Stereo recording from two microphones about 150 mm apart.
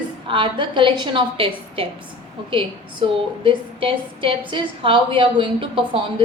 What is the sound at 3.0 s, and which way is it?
A woman's voice, 35° right (ahead or behind).